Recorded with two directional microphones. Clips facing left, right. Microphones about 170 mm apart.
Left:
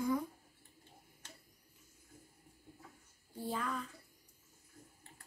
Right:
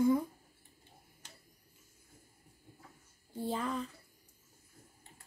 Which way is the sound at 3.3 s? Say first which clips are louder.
Right 4 dB; 25° right (ahead or behind).